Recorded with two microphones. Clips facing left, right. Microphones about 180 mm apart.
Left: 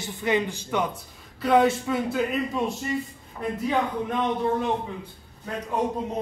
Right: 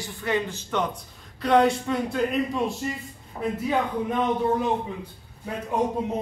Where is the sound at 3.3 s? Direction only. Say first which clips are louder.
Right 2 dB; 35° right (ahead or behind).